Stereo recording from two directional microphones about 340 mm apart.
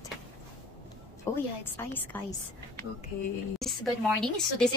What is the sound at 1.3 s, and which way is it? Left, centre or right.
Speech, centre.